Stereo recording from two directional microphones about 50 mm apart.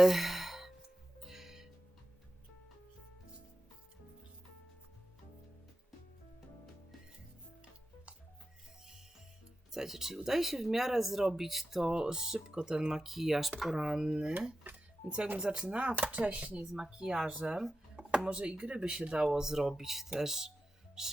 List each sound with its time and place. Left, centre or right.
0.0 s sigh: centre
1.2 s music: centre
9.7 s speech: centre
15.4 s speech: centre
16.7 s speech: centre
17.2 s speech: right
17.5 s speech: centre
18.3 s speech: right
21.0 s music: centre